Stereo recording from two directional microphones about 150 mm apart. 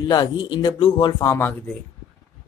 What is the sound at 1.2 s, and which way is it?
Speech, 15° left (ahead or behind).